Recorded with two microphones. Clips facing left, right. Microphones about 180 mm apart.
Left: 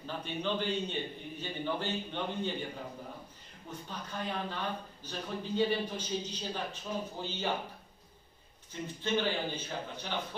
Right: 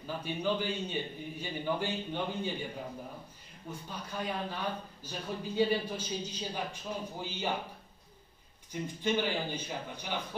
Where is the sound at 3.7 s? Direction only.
10° right (ahead or behind).